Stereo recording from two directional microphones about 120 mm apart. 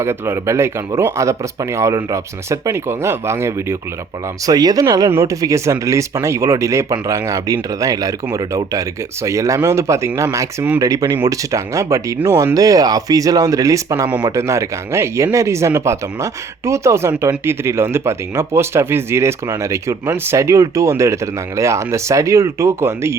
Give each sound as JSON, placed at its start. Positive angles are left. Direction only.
{"t": 0.0, "sound": "speech", "side_deg": -20}